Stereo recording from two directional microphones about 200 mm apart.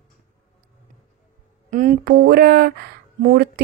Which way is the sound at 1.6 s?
40° right (ahead or behind).